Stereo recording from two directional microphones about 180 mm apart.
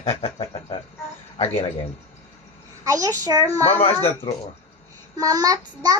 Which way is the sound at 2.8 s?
20° right (ahead or behind).